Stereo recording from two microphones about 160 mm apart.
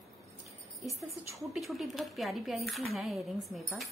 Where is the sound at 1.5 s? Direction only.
Centre (ahead or behind).